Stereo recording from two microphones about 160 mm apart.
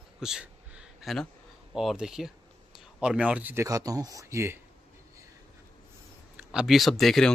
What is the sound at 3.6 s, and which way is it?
Speech, 20° right (ahead or behind).